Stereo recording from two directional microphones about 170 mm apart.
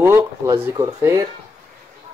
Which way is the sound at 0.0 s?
15° right (ahead or behind).